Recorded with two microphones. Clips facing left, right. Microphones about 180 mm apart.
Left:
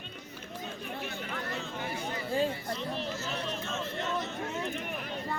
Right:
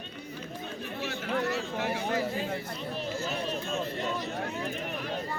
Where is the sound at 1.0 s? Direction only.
85° right; by 2.2 s 65° right (ahead or behind).